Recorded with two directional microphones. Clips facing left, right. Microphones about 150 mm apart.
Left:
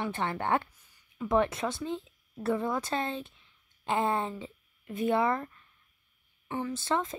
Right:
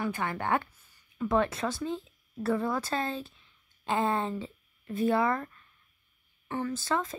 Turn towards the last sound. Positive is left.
turn(degrees=20)  # may be behind; listen again after turning